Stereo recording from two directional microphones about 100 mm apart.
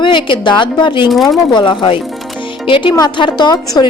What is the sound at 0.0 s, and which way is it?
A woman's voice, 55° left (ahead or behind).